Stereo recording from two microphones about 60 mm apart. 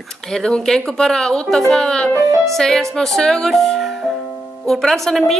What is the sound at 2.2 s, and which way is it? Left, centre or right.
Speech, right.